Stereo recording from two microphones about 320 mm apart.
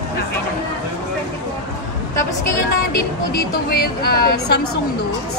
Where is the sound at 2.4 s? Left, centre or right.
Left.